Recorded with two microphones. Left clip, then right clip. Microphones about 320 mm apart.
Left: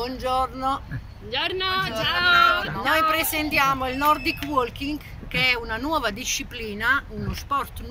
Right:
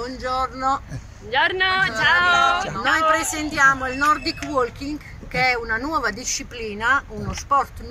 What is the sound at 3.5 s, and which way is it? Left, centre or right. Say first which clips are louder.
Speech: right 5 dB; centre.